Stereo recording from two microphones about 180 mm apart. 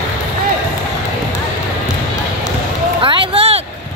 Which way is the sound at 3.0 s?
30° right (ahead or behind).